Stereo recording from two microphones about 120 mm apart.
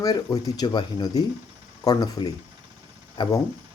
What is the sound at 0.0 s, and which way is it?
Speech, 30° left (ahead or behind).